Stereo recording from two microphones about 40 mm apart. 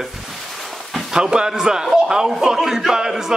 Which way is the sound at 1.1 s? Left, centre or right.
Centre.